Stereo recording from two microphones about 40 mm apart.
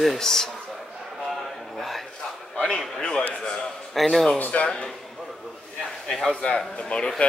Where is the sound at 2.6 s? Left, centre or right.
Centre.